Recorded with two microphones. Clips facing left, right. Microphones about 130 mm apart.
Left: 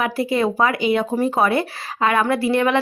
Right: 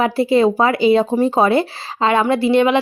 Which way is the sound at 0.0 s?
25° right (ahead or behind).